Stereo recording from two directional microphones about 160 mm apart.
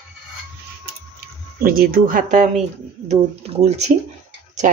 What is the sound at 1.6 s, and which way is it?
Speech, 65° right (ahead or behind).